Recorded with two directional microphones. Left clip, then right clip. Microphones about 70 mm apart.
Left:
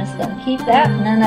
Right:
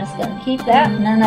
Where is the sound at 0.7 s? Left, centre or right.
Right.